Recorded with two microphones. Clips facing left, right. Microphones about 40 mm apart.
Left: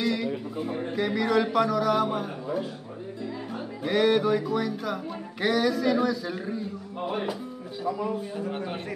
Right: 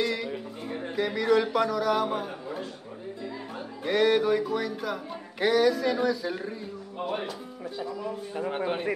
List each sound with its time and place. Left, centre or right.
0.0 s a sound: centre
3.8 s speech: centre
8.4 s a man's voice: right